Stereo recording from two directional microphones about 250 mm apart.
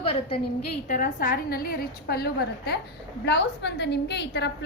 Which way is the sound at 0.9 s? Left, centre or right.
Left.